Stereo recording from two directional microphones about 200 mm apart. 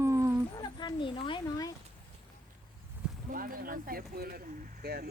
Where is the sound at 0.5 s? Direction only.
20° left (ahead or behind).